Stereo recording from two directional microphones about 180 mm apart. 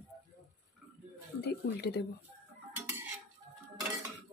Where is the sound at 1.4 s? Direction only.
65° left (ahead or behind).